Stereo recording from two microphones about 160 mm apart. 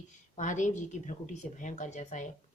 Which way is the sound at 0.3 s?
50° left (ahead or behind).